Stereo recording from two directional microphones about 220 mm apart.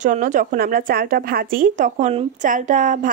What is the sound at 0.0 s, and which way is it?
A woman's voice, 35° right (ahead or behind).